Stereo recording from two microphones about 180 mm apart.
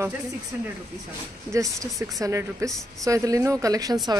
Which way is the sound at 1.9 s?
Centre (ahead or behind).